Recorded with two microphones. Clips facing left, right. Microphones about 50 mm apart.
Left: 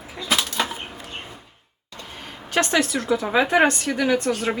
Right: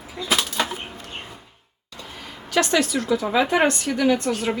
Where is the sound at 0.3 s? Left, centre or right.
Centre.